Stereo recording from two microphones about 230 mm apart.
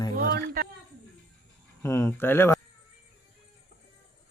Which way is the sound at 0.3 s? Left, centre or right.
Right.